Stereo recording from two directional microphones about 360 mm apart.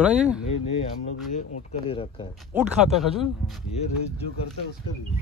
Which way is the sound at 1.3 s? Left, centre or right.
Centre.